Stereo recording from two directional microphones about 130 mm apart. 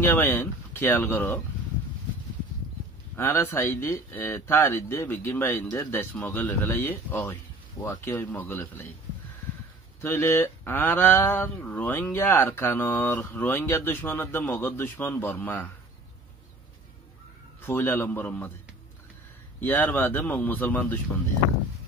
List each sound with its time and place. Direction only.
0.0 s speech: 20° left (ahead or behind)
3.2 s speech: 15° left (ahead or behind)
10.0 s speech: 20° left (ahead or behind)
17.6 s speech: 15° left (ahead or behind)
19.6 s speech: 15° left (ahead or behind)